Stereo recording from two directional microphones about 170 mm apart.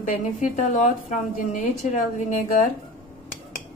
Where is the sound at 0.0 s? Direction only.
45° left (ahead or behind).